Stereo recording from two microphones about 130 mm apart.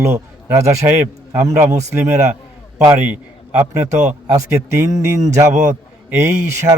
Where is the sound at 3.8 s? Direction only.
60° right (ahead or behind).